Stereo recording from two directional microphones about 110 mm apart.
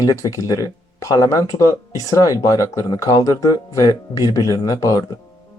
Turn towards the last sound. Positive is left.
turn(degrees=35)  # may be behind; listen again after turning